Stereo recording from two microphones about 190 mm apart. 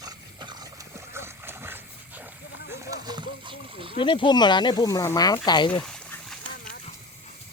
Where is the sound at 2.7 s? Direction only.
15° right (ahead or behind).